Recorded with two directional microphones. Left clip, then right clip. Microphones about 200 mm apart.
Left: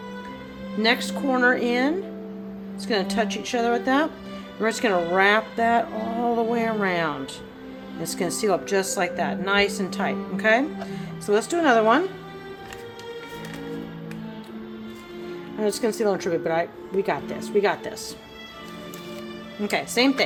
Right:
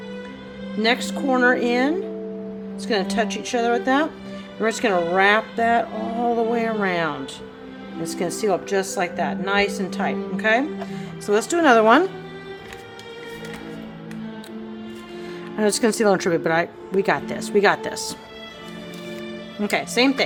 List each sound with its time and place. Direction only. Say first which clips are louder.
0.8 s a woman's voice: right 1 dB; 10° right (ahead or behind)
15.5 s speech: right 4 dB; 25° right (ahead or behind)
19.6 s speech: right 2 dB; 15° right (ahead or behind)